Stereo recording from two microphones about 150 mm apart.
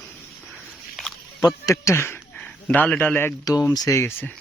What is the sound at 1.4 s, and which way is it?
A man's voice, 20° left (ahead or behind).